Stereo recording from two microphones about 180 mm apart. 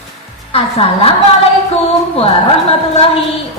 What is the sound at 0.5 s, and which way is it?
Music, 30° left (ahead or behind).